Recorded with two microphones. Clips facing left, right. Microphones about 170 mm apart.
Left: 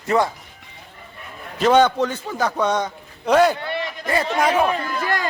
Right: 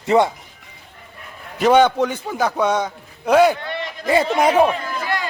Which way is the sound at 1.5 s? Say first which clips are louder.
Right 1 dB; 10° right (ahead or behind).